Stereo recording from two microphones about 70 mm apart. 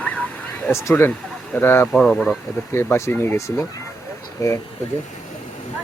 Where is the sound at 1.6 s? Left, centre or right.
Left.